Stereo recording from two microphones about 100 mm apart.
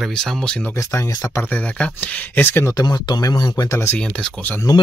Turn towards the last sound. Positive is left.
turn(degrees=35)  # may be behind; listen again after turning